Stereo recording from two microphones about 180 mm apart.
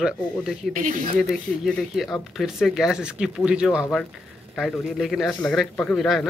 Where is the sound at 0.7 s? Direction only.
50° right (ahead or behind).